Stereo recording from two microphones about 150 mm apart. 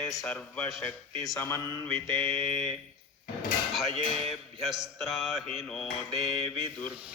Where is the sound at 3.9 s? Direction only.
40° right (ahead or behind).